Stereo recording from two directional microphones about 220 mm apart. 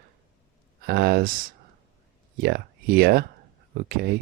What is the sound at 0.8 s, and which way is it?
Speech, 45° right (ahead or behind).